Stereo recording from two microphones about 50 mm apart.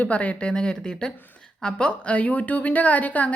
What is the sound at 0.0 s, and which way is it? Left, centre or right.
Speech, left.